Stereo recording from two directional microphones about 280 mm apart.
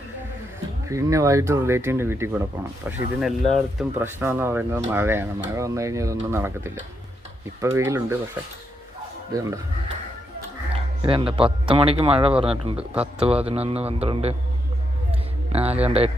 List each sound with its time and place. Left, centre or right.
0.9 s speech: centre
7.6 s speech: centre
9.3 s speech: centre
10.7 s a man's voice: centre
12.9 s speech: centre
13.2 s a man's voice: right
15.5 s a man's voice: right